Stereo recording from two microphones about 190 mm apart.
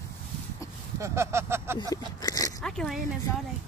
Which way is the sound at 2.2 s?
20° left (ahead or behind).